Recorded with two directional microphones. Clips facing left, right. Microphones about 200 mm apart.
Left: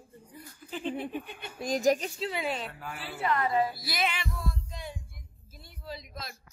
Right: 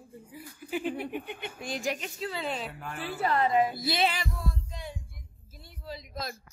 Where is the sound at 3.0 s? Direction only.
40° right (ahead or behind).